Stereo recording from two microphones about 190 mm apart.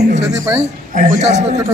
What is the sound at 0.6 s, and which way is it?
Speech, 40° right (ahead or behind).